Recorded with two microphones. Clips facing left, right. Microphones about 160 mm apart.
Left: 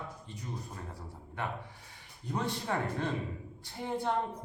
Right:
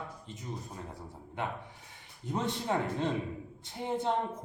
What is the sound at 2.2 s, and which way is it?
Speech, 20° right (ahead or behind).